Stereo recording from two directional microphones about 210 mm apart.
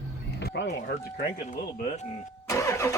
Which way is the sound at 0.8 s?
45° left (ahead or behind).